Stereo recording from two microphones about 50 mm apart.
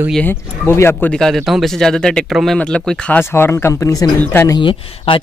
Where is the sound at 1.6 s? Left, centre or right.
Centre.